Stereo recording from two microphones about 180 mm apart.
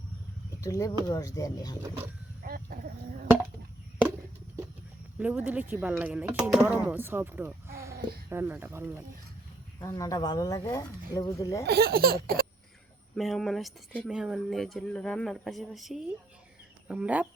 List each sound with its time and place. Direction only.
0.6 s speech: 20° left (ahead or behind)
2.4 s chicken: 55° right (ahead or behind)
5.1 s speech: 10° right (ahead or behind)
9.8 s speech: 20° left (ahead or behind)
11.6 s baby laughter: 65° right (ahead or behind)
13.1 s speech: centre (ahead or behind)